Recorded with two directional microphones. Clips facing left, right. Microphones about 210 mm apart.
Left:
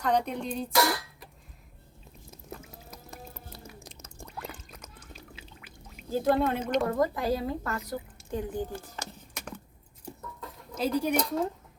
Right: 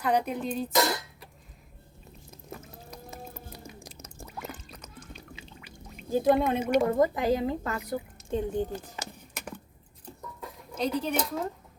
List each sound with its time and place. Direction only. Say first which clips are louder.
0.0 s music: right 1 dB; 5° right (ahead or behind)
0.7 s speech: left 1 dB; 20° right (ahead or behind)
2.5 s music: right 1 dB; centre (ahead or behind)
3.8 s a sound: right 1 dB; 10° right (ahead or behind)
5.1 s pour: right 2 dB; 5° left (ahead or behind)
6.1 s speech: right 2 dB; 15° right (ahead or behind)
9.0 s a sound: right 1 dB; 10° right (ahead or behind)
10.8 s speech: left 2 dB; 5° left (ahead or behind)